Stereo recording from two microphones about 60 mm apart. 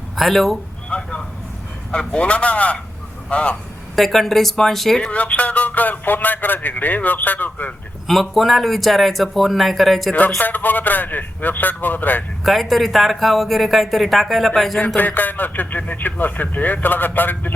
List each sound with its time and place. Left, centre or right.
0.2 s speech: centre
0.9 s vehicle: centre
1.9 s a man's voice: centre
3.9 s speech: centre
5.0 s a man's voice: left
8.0 s speech: centre
10.2 s a man's voice: left
12.4 s speech: centre
14.9 s a man's voice: left